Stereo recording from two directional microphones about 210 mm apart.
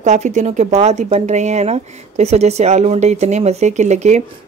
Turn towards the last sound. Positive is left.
turn(degrees=-35)  # may be behind; listen again after turning